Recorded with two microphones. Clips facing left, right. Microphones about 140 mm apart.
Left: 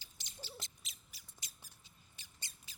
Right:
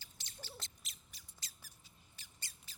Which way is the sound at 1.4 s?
20° left (ahead or behind).